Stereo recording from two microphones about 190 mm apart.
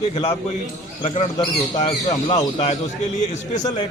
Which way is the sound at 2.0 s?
20° left (ahead or behind).